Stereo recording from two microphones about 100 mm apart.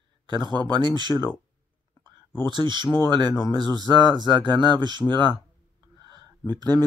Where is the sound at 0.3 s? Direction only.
45° right (ahead or behind).